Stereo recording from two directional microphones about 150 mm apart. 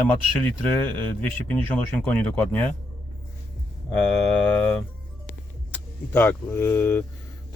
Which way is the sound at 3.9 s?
5° left (ahead or behind).